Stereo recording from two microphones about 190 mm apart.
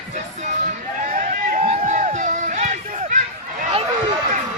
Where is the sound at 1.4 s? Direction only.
40° right (ahead or behind).